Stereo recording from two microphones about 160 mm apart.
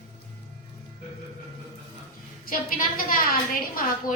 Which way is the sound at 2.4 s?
60° left (ahead or behind).